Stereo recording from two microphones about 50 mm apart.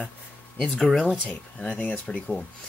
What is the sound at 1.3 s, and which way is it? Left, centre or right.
Speech, centre.